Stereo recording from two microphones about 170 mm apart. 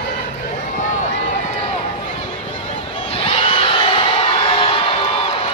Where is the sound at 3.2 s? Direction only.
35° left (ahead or behind).